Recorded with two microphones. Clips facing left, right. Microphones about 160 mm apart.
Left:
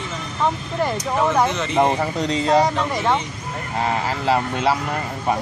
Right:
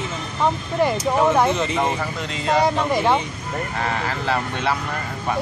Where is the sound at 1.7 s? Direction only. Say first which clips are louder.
Left 4 dB; 35° left (ahead or behind).